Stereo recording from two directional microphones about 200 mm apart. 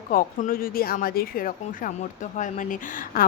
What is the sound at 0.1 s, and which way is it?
Speech, 45° left (ahead or behind).